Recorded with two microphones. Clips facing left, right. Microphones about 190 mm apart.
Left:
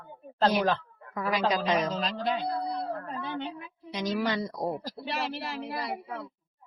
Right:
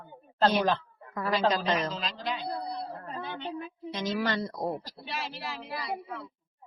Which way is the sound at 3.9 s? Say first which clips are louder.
Left 1 dB; 10° left (ahead or behind).